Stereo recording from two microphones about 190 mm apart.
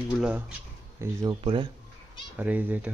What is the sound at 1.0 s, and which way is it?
Speech, 20° right (ahead or behind).